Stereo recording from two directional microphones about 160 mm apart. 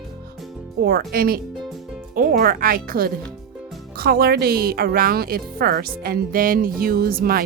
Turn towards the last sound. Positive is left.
turn(degrees=-65)  # may be behind; listen again after turning